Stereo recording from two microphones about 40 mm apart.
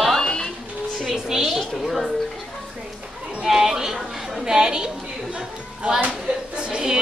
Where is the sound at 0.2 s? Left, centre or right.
Centre.